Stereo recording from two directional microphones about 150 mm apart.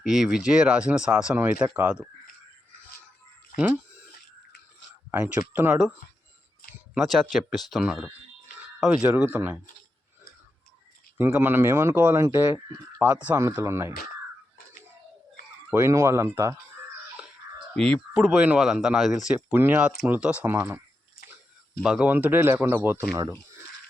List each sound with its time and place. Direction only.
0.0 s speech: 5° right (ahead or behind)
3.5 s speech: 65° left (ahead or behind)
5.1 s speech: 15° right (ahead or behind)
6.9 s speech: centre (ahead or behind)
11.2 s speech: 10° right (ahead or behind)
15.7 s speech: 20° right (ahead or behind)
18.1 s speech: 5° right (ahead or behind)
21.8 s speech: 10° right (ahead or behind)